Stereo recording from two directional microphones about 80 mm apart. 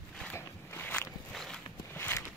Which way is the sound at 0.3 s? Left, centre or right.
Left.